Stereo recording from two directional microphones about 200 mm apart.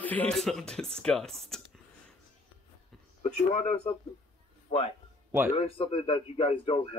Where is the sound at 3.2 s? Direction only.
30° left (ahead or behind).